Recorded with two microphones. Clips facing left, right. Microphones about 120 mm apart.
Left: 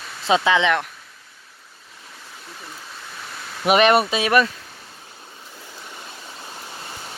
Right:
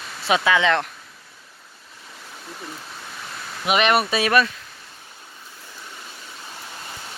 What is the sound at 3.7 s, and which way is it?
Speech, 40° left (ahead or behind).